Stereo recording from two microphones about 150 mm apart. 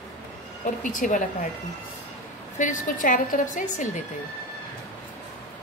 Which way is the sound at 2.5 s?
55° left (ahead or behind).